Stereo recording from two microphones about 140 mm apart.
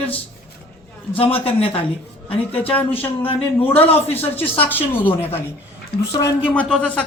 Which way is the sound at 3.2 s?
40° left (ahead or behind).